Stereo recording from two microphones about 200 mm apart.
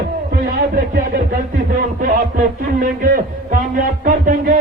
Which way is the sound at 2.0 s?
45° right (ahead or behind).